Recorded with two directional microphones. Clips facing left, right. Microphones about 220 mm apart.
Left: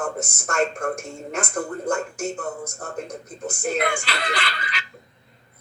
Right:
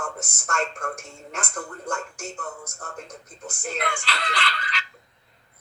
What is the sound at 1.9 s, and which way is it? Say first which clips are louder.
Speech: left 6 dB; 50° left (ahead or behind).